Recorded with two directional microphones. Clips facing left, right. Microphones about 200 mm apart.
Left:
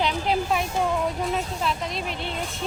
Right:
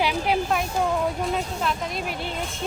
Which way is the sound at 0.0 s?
5° right (ahead or behind).